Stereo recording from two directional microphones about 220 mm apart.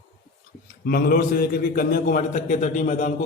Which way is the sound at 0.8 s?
45° left (ahead or behind).